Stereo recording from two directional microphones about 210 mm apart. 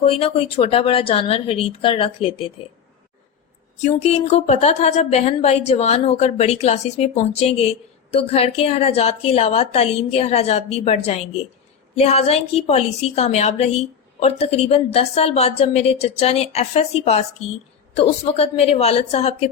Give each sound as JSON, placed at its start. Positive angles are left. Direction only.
{"t": 0.0, "sound": "a woman's voice", "side_deg": 25}
{"t": 3.8, "sound": "a woman's voice", "side_deg": 30}